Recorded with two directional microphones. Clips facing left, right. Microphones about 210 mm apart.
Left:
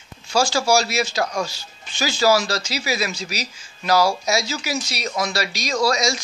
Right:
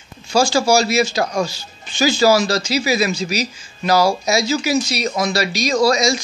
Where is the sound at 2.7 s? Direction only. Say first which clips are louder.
Right 7 dB; centre (ahead or behind).